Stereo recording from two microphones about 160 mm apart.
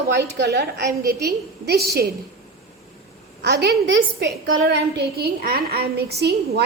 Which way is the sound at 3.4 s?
90° right.